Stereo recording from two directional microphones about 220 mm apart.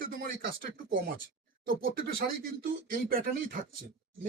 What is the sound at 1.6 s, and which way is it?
Speech, 40° right (ahead or behind).